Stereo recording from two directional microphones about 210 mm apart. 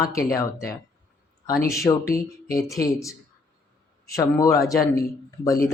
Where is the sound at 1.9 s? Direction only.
20° left (ahead or behind).